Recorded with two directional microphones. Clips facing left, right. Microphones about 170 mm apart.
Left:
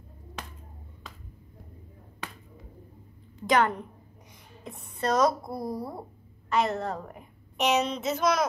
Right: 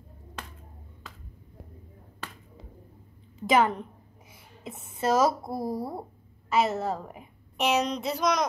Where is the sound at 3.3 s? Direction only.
5° right (ahead or behind).